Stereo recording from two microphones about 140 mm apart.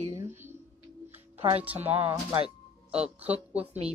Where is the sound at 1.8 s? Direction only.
45° right (ahead or behind).